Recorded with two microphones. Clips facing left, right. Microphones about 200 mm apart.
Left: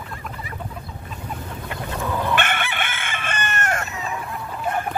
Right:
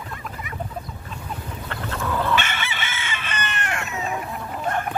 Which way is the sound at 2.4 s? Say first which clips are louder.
Left 4 dB; 55° left (ahead or behind).